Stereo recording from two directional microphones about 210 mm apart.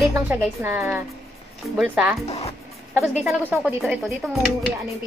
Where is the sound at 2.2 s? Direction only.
30° left (ahead or behind).